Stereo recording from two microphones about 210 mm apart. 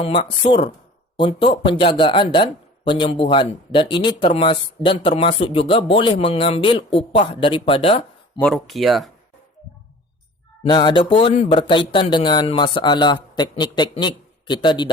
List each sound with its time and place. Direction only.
0.0 s speech: 25° left (ahead or behind)
8.4 s speech: centre (ahead or behind)
10.6 s speech: 20° left (ahead or behind)